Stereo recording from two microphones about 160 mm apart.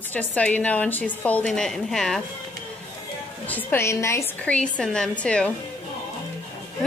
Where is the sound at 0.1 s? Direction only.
10° left (ahead or behind).